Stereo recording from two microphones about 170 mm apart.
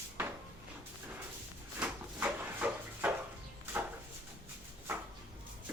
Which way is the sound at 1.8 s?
10° right (ahead or behind).